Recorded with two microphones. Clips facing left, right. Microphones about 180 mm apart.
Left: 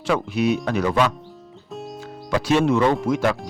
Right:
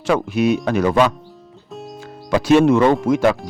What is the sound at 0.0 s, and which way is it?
Speech, 45° right (ahead or behind).